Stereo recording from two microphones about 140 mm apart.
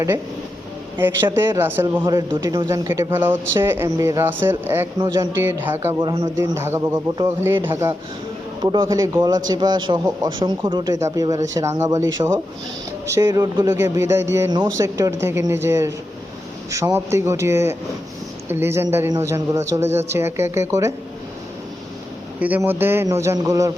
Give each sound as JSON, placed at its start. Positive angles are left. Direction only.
{"t": 0.9, "sound": "speech", "side_deg": -15}
{"t": 6.0, "sound": "speech", "side_deg": -35}
{"t": 6.3, "sound": "a man's voice", "side_deg": -20}
{"t": 22.4, "sound": "a man's voice", "side_deg": -10}